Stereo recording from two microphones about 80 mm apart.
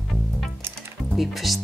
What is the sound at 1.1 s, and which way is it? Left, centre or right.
Speech, centre.